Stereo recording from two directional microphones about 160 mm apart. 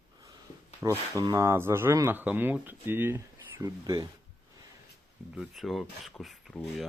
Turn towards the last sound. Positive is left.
turn(degrees=0)  # may be behind; listen again after turning